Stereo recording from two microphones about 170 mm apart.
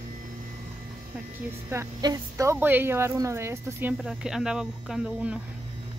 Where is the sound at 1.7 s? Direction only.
20° right (ahead or behind).